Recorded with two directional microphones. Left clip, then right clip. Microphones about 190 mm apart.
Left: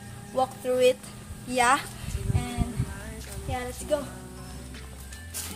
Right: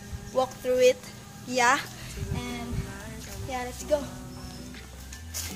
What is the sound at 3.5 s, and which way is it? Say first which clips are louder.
Speech: right 1 dB; 5° right (ahead or behind).